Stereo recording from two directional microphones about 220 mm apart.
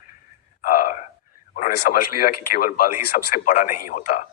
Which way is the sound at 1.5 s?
40° left (ahead or behind).